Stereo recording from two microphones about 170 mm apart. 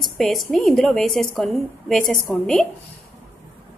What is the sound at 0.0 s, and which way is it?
A woman's voice, centre (ahead or behind).